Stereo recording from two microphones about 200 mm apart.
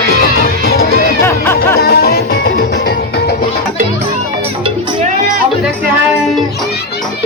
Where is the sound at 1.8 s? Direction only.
50° left (ahead or behind).